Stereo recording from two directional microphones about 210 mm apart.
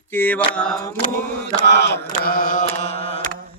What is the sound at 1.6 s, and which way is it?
Mantra, 55° left (ahead or behind).